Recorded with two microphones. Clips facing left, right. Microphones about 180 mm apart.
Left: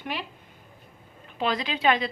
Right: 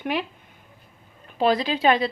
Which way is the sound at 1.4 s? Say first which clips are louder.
Right 6 dB; 35° right (ahead or behind).